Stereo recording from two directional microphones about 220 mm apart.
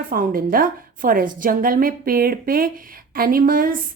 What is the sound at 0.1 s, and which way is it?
A woman's voice, 40° right (ahead or behind).